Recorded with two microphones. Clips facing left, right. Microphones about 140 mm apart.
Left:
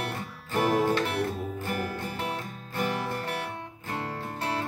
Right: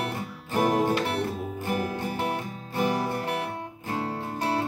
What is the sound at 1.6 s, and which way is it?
Music, 15° right (ahead or behind).